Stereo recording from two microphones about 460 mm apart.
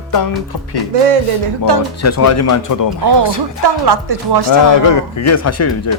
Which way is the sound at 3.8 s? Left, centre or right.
Right.